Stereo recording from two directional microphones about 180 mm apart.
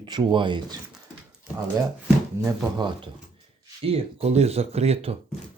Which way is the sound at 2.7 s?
25° right (ahead or behind).